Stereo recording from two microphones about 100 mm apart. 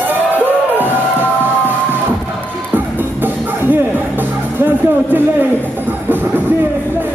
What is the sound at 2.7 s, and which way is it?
Music, 20° right (ahead or behind).